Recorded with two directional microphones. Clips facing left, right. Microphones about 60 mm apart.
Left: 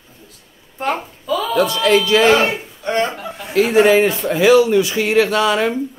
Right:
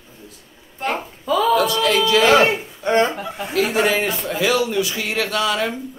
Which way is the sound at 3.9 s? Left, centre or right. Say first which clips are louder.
Left 7 dB; left.